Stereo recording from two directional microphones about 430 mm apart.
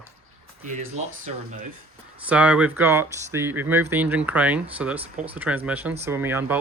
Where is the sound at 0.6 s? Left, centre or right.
Centre.